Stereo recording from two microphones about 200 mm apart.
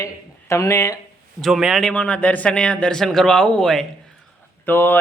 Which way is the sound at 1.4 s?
Centre (ahead or behind).